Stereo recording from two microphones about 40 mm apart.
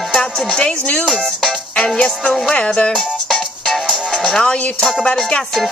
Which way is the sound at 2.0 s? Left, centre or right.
Centre.